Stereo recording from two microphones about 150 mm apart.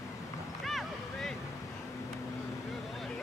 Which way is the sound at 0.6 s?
Centre (ahead or behind).